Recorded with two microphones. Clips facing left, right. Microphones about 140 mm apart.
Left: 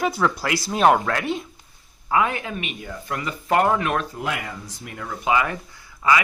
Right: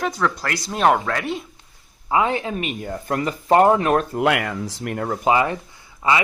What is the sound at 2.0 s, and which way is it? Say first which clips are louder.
Speech: right 2 dB; 25° right (ahead or behind).